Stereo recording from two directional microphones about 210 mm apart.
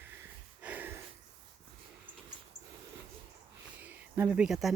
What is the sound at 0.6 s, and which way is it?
Gasp, 10° right (ahead or behind).